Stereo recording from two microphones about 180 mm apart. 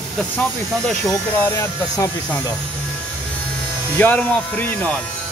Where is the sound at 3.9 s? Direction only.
10° left (ahead or behind).